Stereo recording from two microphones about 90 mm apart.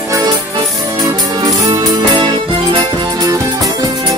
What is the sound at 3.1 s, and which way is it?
Music, 45° right (ahead or behind).